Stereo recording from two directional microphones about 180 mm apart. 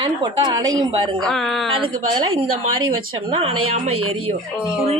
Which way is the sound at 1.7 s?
30° right (ahead or behind).